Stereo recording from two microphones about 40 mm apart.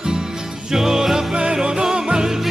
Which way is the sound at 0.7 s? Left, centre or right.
Centre.